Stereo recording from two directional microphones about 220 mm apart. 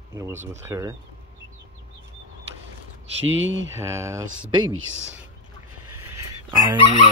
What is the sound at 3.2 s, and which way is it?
Speech, 60° right (ahead or behind).